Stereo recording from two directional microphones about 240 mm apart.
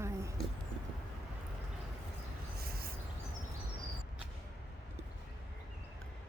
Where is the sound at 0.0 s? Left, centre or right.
Centre.